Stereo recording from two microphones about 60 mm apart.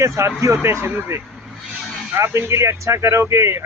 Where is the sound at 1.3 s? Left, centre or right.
Centre.